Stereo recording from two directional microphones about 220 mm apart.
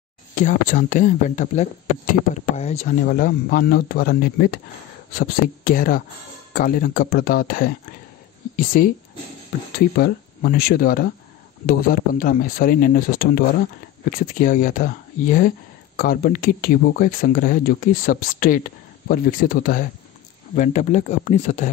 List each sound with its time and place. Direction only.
0.4 s speech: 35° left (ahead or behind)